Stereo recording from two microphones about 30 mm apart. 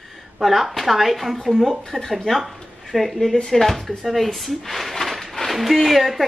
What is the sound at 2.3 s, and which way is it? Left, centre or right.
Speech, left.